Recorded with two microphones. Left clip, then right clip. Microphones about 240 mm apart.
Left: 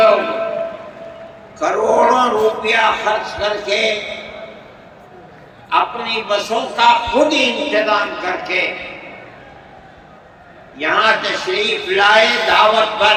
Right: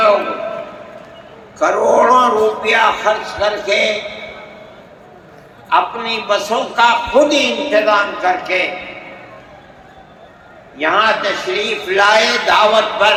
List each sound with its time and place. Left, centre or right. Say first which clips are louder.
1.5 s speech: right 2 dB; centre
5.6 s a man's voice: right 2 dB; centre
10.8 s a man's voice: right 1 dB; centre